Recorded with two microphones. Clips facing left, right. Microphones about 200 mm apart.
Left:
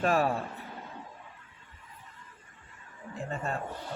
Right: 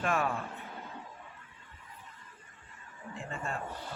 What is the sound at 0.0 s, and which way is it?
Speech, 35° left (ahead or behind).